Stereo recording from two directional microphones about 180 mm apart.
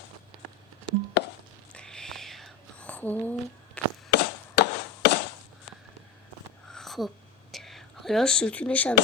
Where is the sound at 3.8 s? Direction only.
10° left (ahead or behind).